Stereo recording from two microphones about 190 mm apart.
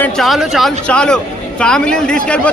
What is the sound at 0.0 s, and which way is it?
A man's voice, centre (ahead or behind).